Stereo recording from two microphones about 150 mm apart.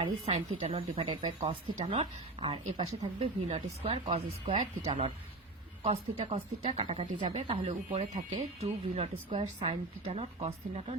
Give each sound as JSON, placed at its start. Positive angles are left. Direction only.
{"t": 0.0, "sound": "speech", "side_deg": -40}
{"t": 5.8, "sound": "speech", "side_deg": -45}